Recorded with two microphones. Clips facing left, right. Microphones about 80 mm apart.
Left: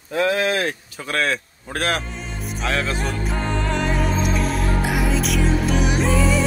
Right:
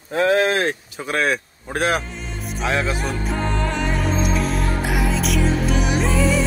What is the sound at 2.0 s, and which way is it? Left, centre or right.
Music, centre.